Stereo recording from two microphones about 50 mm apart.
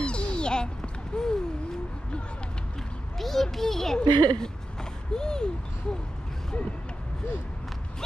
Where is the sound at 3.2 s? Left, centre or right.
Centre.